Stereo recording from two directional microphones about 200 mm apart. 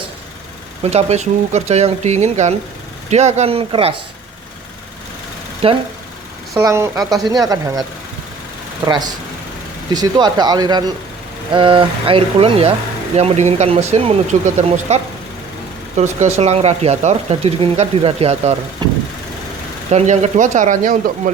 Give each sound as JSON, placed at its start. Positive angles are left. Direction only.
{"t": 0.9, "sound": "speech", "side_deg": -35}
{"t": 5.6, "sound": "speech", "side_deg": -30}
{"t": 6.5, "sound": "speech", "side_deg": -15}
{"t": 8.9, "sound": "speech", "side_deg": -20}
{"t": 18.8, "sound": "vehicle", "side_deg": -20}
{"t": 19.9, "sound": "speech", "side_deg": -35}